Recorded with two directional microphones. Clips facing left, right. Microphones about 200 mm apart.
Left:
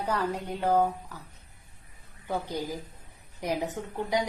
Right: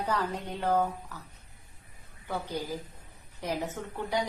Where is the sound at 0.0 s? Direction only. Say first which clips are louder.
Left 2 dB; 10° left (ahead or behind).